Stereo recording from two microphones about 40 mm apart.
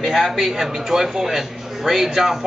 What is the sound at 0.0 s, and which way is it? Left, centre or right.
A man's voice, centre.